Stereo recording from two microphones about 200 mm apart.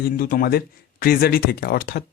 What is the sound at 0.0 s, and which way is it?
Speech, 45° left (ahead or behind).